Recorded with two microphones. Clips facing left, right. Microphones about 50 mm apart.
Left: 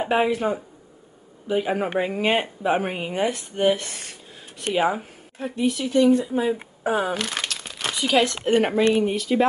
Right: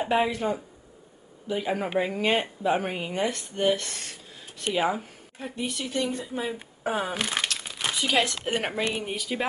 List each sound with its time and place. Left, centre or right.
0.0 s speech: centre
5.4 s speech: centre
7.2 s crumpling: centre
8.5 s speech: centre